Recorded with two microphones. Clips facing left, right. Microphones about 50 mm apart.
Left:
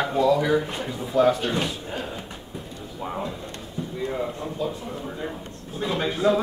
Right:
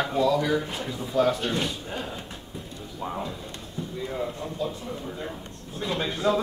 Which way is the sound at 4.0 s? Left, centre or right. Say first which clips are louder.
Left 3 dB; centre.